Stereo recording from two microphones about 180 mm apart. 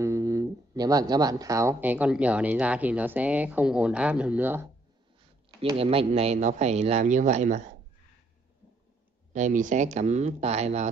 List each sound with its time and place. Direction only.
0.0 s speech: 15° right (ahead or behind)
5.8 s speech: 35° right (ahead or behind)
9.3 s speech: 45° right (ahead or behind)